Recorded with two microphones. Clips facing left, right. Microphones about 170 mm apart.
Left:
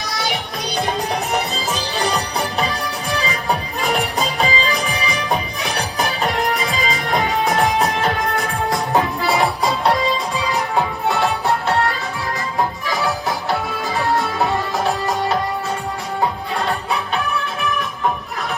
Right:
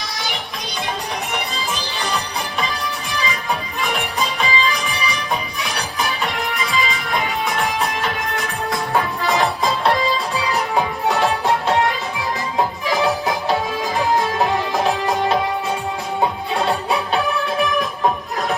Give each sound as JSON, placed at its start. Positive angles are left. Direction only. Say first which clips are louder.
{"t": 2.0, "sound": "music", "louder": "left 5 dB", "side_deg": 40}
{"t": 3.8, "sound": "music", "louder": "left 2 dB", "side_deg": 40}
{"t": 8.9, "sound": "music", "louder": "even", "side_deg": 15}
{"t": 10.8, "sound": "music", "louder": "even", "side_deg": -10}
{"t": 12.9, "sound": "music", "louder": "right 2 dB", "side_deg": -15}
{"t": 14.8, "sound": "music", "louder": "right 1 dB", "side_deg": -15}